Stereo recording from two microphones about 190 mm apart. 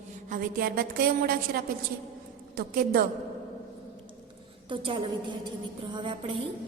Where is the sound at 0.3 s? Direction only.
50° right (ahead or behind).